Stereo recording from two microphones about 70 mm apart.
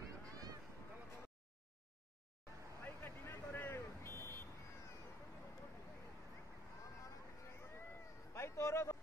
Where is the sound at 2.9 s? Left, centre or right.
Left.